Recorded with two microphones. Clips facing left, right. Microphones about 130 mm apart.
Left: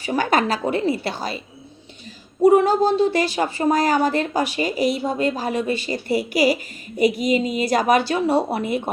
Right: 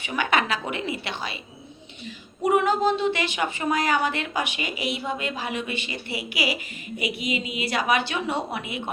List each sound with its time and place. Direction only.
0.0 s a woman's voice: 40° left (ahead or behind)